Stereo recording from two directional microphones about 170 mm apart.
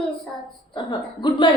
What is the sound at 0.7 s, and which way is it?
Speech, 25° left (ahead or behind).